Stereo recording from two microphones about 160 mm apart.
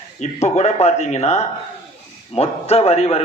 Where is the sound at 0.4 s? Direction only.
45° left (ahead or behind).